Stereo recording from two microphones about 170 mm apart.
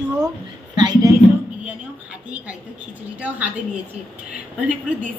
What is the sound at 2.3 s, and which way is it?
A woman's voice, 10° right (ahead or behind).